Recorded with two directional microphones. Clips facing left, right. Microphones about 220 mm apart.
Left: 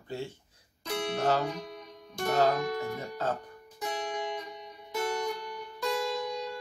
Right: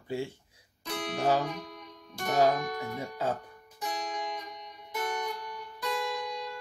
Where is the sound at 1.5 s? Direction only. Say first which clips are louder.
Left 2 dB; 25° left (ahead or behind).